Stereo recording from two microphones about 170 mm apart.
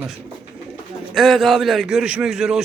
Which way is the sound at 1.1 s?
Centre (ahead or behind).